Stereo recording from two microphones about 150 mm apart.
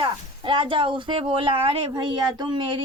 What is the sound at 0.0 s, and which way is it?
Speech, 35° right (ahead or behind).